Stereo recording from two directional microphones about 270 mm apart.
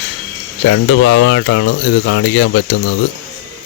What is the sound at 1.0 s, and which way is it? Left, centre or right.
Mantra, left.